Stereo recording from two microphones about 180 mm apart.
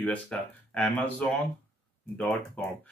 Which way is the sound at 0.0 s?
5° left (ahead or behind).